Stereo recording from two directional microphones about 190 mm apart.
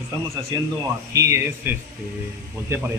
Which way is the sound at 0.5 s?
20° right (ahead or behind).